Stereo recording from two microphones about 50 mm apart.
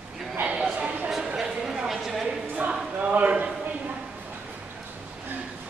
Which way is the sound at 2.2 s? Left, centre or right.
Right.